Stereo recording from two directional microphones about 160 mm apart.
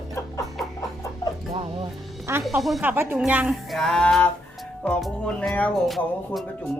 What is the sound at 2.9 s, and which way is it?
A child's voice, 10° right (ahead or behind).